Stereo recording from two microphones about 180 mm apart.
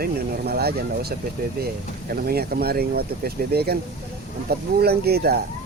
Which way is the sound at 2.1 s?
55° right (ahead or behind).